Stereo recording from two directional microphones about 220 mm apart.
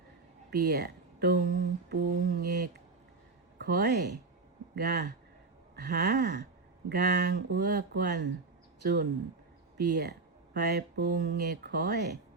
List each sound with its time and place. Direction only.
0.5 s speech: 45° right (ahead or behind)